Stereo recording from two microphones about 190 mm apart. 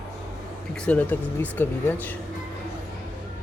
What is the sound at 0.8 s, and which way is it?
Speech, 10° left (ahead or behind).